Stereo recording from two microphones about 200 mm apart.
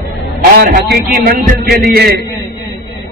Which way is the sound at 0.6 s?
45° right (ahead or behind).